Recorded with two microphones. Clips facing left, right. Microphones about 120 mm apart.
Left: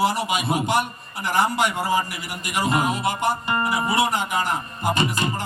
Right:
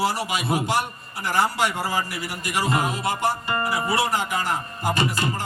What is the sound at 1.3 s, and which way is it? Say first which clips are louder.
Music: left 1 dB; 20° left (ahead or behind).